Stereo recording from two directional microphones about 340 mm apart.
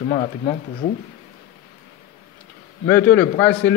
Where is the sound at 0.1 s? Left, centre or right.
Centre.